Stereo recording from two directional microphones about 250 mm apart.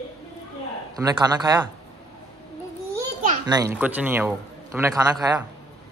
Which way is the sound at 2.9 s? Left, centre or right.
Centre.